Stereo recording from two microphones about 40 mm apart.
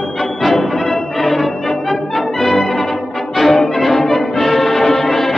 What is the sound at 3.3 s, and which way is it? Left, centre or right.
Music, centre.